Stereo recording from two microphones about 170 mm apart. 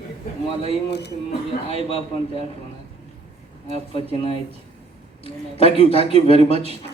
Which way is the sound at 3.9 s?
35° left (ahead or behind).